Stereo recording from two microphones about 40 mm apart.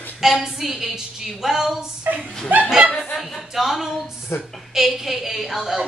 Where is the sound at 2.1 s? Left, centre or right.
Right.